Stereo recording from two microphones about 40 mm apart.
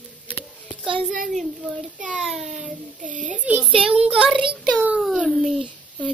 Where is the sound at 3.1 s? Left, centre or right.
Right.